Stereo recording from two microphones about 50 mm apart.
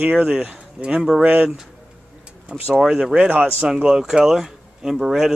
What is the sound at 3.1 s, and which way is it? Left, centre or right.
Speech, right.